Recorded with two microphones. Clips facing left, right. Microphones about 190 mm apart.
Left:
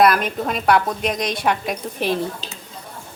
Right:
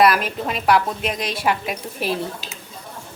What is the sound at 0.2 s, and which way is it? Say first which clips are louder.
A woman's voice: left 2 dB; 5° right (ahead or behind).